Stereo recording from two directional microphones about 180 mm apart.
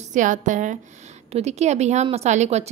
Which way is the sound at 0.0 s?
45° right (ahead or behind).